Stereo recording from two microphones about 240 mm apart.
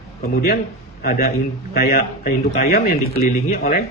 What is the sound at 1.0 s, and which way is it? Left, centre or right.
Speech, left.